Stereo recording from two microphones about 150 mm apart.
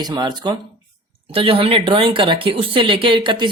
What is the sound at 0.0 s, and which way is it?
Speech, 25° right (ahead or behind).